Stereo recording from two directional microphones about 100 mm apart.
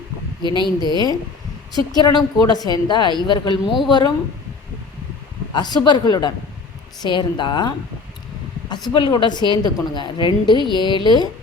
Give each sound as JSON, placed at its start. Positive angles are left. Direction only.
{"t": 0.6, "sound": "a woman's voice", "side_deg": -45}
{"t": 1.7, "sound": "a woman's voice", "side_deg": 40}
{"t": 5.5, "sound": "a woman's voice", "side_deg": 45}
{"t": 8.9, "sound": "a woman's voice", "side_deg": 55}